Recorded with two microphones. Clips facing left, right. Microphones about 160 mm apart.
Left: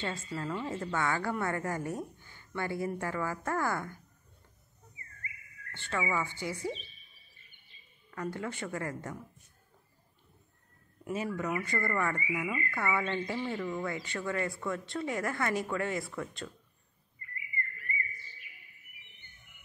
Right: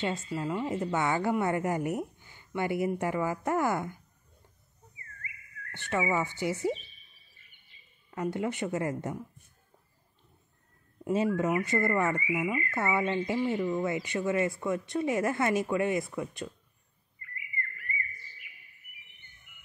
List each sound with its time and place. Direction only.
0.0 s a woman's voice: 20° right (ahead or behind)
5.7 s speech: 20° right (ahead or behind)
8.1 s speech: 20° right (ahead or behind)
11.1 s speech: 25° right (ahead or behind)